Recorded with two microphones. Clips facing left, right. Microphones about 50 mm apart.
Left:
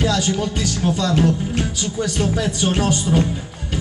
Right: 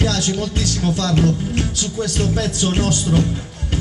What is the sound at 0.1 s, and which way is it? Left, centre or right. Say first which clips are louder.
Speech: left 1 dB; centre.